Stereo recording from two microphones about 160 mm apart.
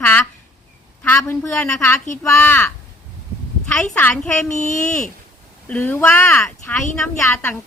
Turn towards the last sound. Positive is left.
turn(degrees=10)  # may be behind; listen again after turning